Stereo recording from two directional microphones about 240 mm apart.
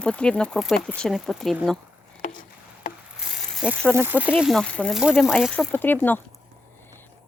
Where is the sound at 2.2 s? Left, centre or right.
Left.